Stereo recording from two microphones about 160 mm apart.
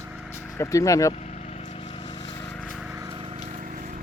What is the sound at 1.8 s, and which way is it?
Vehicle, 30° left (ahead or behind).